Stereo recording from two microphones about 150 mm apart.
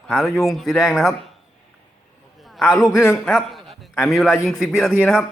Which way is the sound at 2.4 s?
Centre (ahead or behind).